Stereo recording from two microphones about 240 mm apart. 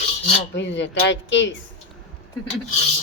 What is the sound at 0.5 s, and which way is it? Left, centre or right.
Speech, left.